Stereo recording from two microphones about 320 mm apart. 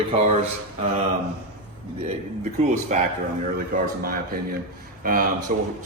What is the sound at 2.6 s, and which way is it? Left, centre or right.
Speech, right.